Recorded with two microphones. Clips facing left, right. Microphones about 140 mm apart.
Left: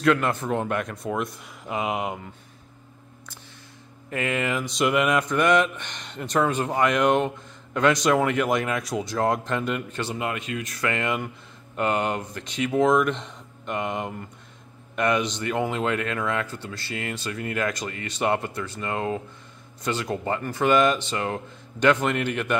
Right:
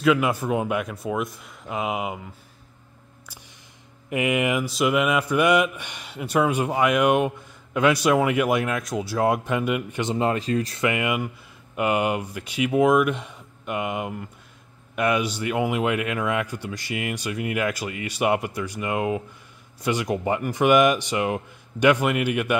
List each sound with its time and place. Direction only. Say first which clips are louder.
0.0 s speech: right 1 dB; 5° right (ahead or behind)
4.1 s speech: right 4 dB; 15° right (ahead or behind)
10.1 s speech: right 9 dB; 35° right (ahead or behind)
10.8 s speech: right 2 dB; 15° right (ahead or behind)